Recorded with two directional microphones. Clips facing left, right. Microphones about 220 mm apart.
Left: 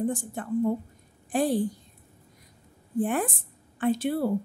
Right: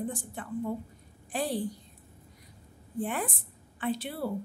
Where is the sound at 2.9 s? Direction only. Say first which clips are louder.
Left 6 dB; 45° left (ahead or behind).